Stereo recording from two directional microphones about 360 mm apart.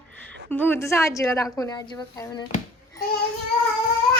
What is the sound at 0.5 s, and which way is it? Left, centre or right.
A woman's voice, centre.